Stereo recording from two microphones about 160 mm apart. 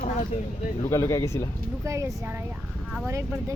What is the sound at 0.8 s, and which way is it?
Speech, 20° left (ahead or behind).